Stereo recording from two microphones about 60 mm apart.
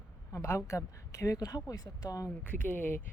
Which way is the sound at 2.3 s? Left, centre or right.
Left.